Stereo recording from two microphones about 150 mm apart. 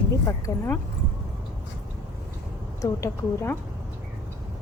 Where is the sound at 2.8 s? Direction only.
20° left (ahead or behind).